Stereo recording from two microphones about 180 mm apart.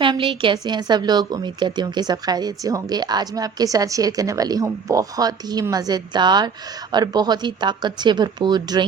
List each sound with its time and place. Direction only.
0.0 s a woman's voice: 30° right (ahead or behind)